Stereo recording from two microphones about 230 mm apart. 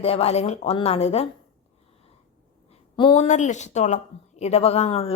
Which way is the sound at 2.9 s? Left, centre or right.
Left.